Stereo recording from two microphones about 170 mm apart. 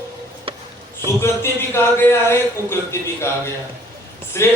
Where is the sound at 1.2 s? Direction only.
15° left (ahead or behind).